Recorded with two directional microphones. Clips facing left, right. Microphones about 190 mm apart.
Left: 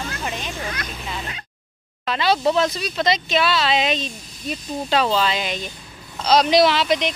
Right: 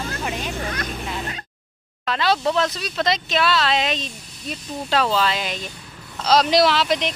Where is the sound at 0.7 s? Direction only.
40° right (ahead or behind).